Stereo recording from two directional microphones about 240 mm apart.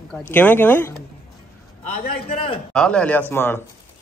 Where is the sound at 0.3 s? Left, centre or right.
Centre.